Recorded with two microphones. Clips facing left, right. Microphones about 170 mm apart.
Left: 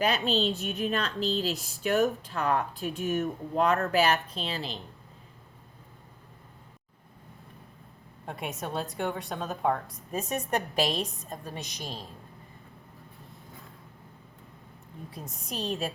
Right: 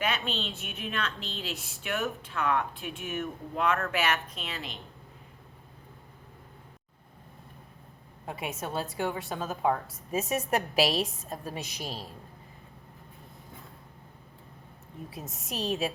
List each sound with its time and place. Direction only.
0.3 s a woman's voice: 35° left (ahead or behind)
8.3 s a woman's voice: centre (ahead or behind)
15.1 s a woman's voice: centre (ahead or behind)